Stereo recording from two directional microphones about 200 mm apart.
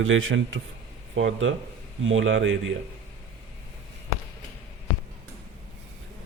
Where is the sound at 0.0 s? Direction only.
75° right (ahead or behind).